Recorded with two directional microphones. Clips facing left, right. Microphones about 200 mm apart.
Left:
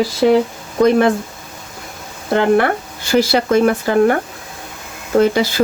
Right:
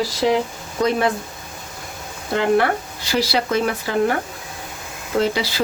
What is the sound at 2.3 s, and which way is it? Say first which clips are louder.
Speech: left 4 dB; 50° left (ahead or behind).